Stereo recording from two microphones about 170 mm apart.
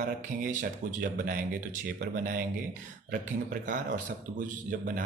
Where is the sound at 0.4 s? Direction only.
50° right (ahead or behind).